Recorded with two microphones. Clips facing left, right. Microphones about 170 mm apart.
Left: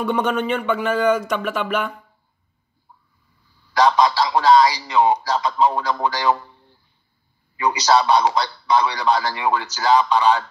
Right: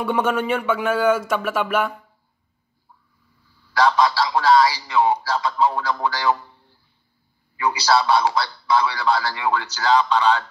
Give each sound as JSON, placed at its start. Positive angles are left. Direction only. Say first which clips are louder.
{"t": 0.1, "sound": "speech", "louder": "right 1 dB", "side_deg": -10}
{"t": 3.7, "sound": "a man's voice", "louder": "left 2 dB", "side_deg": 20}